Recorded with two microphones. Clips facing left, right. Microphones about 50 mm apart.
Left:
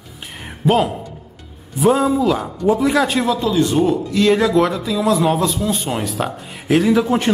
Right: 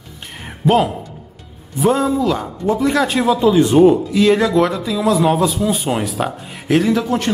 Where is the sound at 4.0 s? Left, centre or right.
Centre.